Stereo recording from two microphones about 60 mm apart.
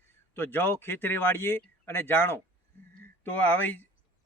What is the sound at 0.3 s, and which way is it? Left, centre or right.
A man's voice, left.